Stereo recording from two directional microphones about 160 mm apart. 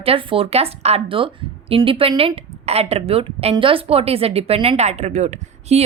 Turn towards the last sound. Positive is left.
turn(degrees=-45)  # may be behind; listen again after turning